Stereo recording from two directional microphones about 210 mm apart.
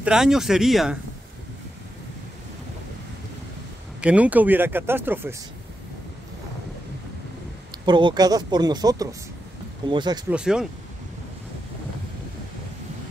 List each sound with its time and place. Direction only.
0.0 s speech: 5° right (ahead or behind)
4.0 s speech: 5° right (ahead or behind)
7.8 s speech: 20° right (ahead or behind)
10.3 s speech: 5° right (ahead or behind)